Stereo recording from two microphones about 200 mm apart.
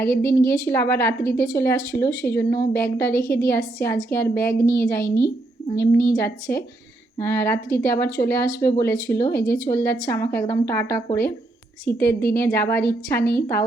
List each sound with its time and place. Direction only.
0.1 s speech: 45° left (ahead or behind)
0.5 s speech: 15° left (ahead or behind)
12.4 s speech: 15° left (ahead or behind)